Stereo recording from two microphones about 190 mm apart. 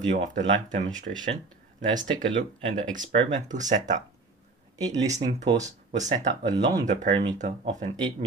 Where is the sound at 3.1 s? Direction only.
40° right (ahead or behind).